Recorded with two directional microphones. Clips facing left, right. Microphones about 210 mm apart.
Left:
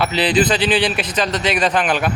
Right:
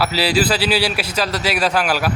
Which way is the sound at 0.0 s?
5° right (ahead or behind).